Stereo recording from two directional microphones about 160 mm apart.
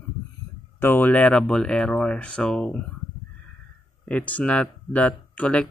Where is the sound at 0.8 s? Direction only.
10° left (ahead or behind).